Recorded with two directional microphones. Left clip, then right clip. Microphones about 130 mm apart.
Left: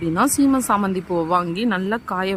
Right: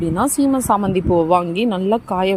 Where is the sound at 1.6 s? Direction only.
25° left (ahead or behind).